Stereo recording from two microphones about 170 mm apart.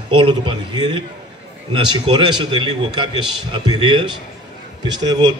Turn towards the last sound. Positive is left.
turn(degrees=-25)  # may be behind; listen again after turning